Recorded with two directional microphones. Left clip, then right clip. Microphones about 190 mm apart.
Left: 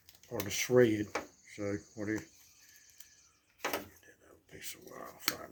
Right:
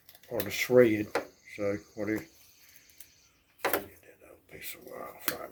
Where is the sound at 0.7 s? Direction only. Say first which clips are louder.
Right 5 dB; 35° left (ahead or behind).